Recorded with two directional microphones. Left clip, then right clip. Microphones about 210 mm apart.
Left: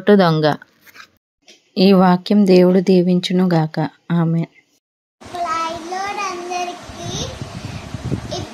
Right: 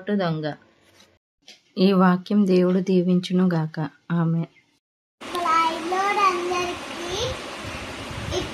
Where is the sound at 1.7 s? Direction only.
25° left (ahead or behind).